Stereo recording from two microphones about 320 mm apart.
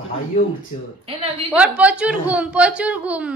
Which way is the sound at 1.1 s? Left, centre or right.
Centre.